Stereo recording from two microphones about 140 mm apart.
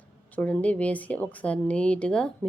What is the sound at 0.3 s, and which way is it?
A woman's voice, 10° left (ahead or behind).